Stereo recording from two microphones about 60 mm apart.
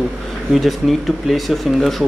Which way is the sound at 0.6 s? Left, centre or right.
Centre.